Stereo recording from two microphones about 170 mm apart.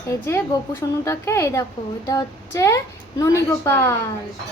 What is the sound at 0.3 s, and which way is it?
A woman's voice, 15° left (ahead or behind).